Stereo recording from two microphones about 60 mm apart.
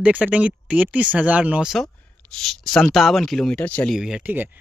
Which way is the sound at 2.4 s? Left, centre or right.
Centre.